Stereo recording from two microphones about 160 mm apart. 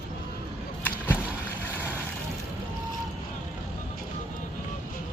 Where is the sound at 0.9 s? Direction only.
10° left (ahead or behind).